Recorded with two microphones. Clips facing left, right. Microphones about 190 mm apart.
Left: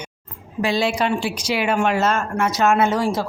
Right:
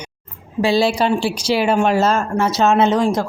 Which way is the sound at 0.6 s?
30° right (ahead or behind).